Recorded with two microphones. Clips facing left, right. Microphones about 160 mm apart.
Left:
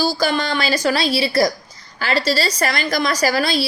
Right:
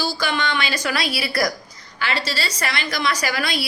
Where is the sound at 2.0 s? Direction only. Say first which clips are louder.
Left 6 dB; 40° left (ahead or behind).